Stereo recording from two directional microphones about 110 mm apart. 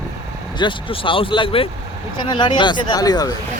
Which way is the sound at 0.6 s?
50° left (ahead or behind).